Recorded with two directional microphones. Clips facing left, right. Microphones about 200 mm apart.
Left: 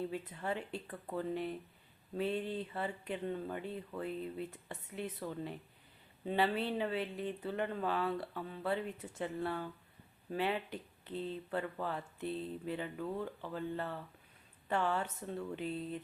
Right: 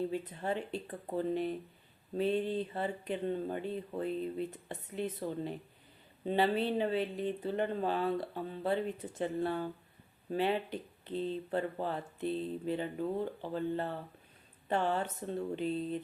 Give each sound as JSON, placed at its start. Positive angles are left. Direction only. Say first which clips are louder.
{"t": 0.1, "sound": "speech", "louder": "right 4 dB", "side_deg": -30}